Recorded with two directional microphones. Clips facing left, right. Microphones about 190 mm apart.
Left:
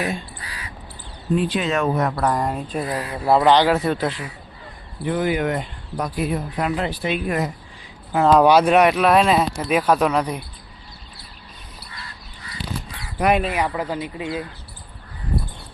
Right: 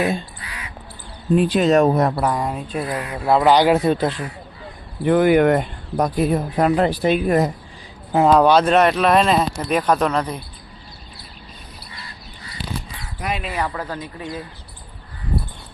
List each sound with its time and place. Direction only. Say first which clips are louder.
0.4 s crow: right 1 dB; 35° left (ahead or behind)
1.4 s speech: right 7 dB; 40° right (ahead or behind)
2.2 s speech: even; centre (ahead or behind)
2.9 s speech: even; 35° left (ahead or behind)
3.2 s speech: even; centre (ahead or behind)
3.5 s speech: right 2 dB; 15° right (ahead or behind)
5.0 s speech: right 7 dB; 60° right (ahead or behind)
6.1 s speech: right 4 dB; 40° right (ahead or behind)
8.4 s speech: even; 10° left (ahead or behind)
13.1 s speech: left 8 dB; 65° left (ahead or behind)
13.5 s speech: left 2 dB; 15° left (ahead or behind)